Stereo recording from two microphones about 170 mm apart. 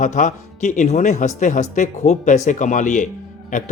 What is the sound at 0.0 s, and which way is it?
Speech, 45° left (ahead or behind).